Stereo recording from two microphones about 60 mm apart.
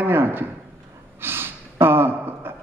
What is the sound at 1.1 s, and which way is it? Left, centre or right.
Gasp, right.